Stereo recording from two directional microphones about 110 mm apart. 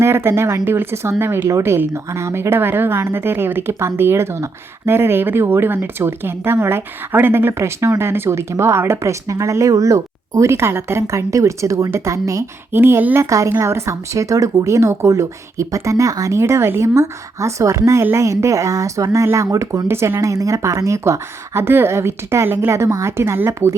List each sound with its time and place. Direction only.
0.0 s speech: 20° right (ahead or behind)